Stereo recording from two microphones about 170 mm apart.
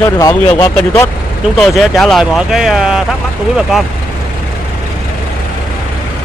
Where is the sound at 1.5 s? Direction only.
Centre (ahead or behind).